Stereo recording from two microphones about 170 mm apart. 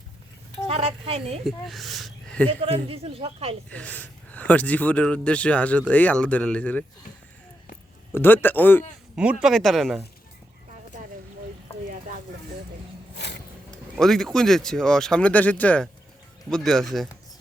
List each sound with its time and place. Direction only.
0.7 s a woman's voice: 35° right (ahead or behind)
1.5 s speech: centre (ahead or behind)
2.5 s speech: 35° right (ahead or behind)
3.7 s speech: 10° left (ahead or behind)
8.1 s speech: 10° left (ahead or behind)
9.4 s speech: centre (ahead or behind)
13.1 s a sound: 80° left
13.9 s speech: centre (ahead or behind)